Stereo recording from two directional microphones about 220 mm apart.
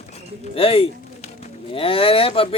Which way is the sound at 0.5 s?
25° left (ahead or behind).